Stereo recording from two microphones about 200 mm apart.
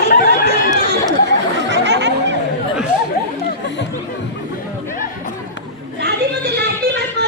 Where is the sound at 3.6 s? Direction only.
60° left (ahead or behind).